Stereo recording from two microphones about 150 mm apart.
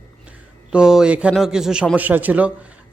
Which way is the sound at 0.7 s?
5° right (ahead or behind).